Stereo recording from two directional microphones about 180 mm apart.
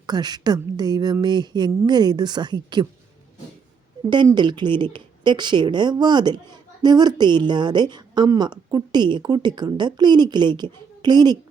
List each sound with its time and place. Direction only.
0.0 s a woman's voice: 25° right (ahead or behind)
4.0 s a woman's voice: 25° right (ahead or behind)